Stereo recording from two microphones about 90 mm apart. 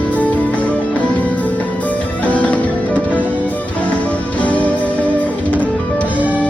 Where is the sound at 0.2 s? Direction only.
15° left (ahead or behind).